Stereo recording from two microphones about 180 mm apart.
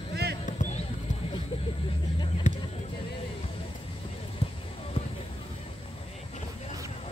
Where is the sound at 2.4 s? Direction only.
45° left (ahead or behind).